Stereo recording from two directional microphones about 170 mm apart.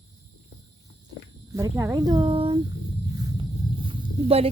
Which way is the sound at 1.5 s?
20° right (ahead or behind).